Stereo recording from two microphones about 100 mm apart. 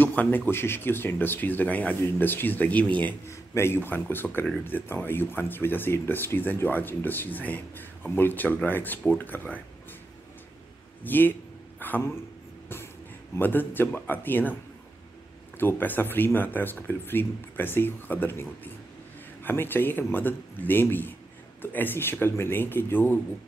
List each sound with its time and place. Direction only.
0.0 s a sound: 15° left (ahead or behind)
0.5 s speech: 25° left (ahead or behind)
3.3 s speech: 25° left (ahead or behind)
11.1 s speech: 20° left (ahead or behind)
13.4 s speech: 20° left (ahead or behind)
15.6 s speech: 20° left (ahead or behind)